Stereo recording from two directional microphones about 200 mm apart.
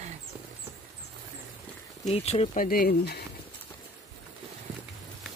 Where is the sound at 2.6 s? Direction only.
45° left (ahead or behind).